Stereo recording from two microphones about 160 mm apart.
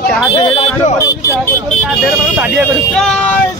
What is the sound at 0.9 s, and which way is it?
Speech, 20° left (ahead or behind).